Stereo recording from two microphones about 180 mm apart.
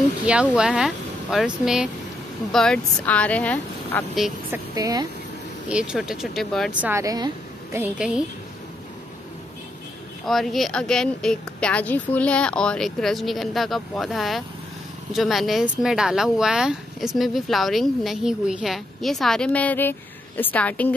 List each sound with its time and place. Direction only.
0.2 s speech: 5° right (ahead or behind)
4.5 s a woman's voice: 20° right (ahead or behind)
5.7 s speech: 5° right (ahead or behind)
6.8 s a woman's voice: 15° right (ahead or behind)
7.7 s a woman's voice: 5° right (ahead or behind)
10.2 s speech: centre (ahead or behind)